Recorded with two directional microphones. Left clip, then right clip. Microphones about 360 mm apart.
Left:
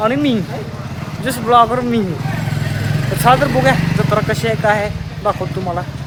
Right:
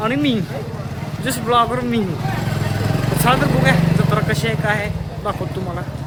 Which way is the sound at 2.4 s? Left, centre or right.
Centre.